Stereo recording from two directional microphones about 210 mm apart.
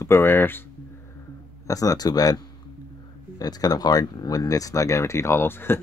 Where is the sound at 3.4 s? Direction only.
20° left (ahead or behind).